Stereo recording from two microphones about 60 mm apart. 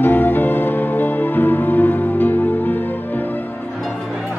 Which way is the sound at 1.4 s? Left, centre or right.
Left.